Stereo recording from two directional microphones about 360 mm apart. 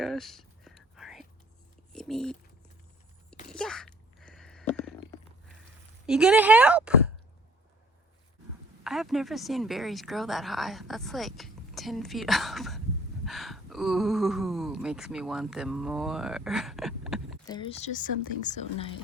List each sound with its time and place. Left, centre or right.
0.0 s whispering: centre
1.9 s speech: centre
3.5 s a sound: centre
6.1 s speech: centre
8.8 s speech: centre
17.4 s speech: centre